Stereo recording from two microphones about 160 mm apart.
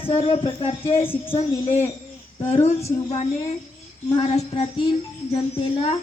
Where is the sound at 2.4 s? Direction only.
45° left (ahead or behind).